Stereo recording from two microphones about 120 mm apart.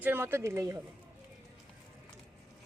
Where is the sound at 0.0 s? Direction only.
20° right (ahead or behind).